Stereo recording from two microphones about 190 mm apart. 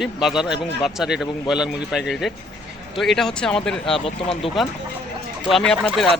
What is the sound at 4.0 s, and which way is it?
Speech, 30° left (ahead or behind).